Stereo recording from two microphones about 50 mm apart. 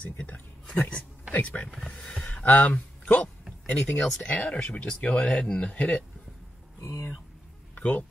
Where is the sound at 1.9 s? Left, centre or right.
Left.